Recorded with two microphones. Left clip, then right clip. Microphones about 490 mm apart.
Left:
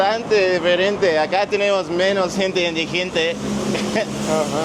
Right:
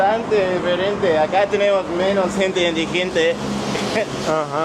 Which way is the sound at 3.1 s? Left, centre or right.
Centre.